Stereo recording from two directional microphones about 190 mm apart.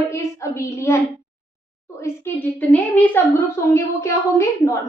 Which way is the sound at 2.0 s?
10° left (ahead or behind).